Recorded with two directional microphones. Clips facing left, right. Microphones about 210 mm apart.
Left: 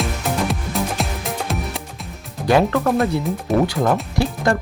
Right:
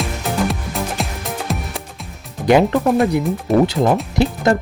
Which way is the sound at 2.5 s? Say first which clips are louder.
Right 3 dB; 20° right (ahead or behind).